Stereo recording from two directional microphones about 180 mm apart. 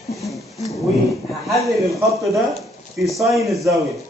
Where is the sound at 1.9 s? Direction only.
15° right (ahead or behind).